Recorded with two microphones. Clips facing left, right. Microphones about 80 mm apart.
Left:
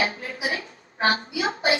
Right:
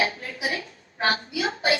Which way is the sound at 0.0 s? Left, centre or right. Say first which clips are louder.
Even; left.